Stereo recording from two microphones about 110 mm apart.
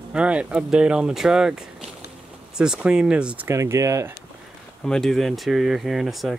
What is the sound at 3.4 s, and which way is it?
Speech, 25° right (ahead or behind).